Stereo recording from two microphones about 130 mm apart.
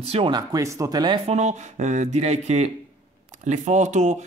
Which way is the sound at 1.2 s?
60° right (ahead or behind).